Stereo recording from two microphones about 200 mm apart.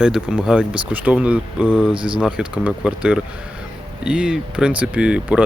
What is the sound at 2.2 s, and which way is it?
Speech, 5° right (ahead or behind).